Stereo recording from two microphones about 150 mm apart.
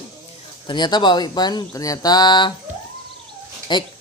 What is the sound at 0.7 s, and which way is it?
Speech, 30° left (ahead or behind).